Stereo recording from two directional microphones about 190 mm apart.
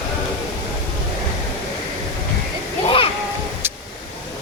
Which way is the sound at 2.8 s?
30° left (ahead or behind).